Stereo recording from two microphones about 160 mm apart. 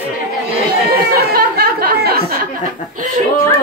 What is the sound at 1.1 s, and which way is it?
Speech, 70° right (ahead or behind).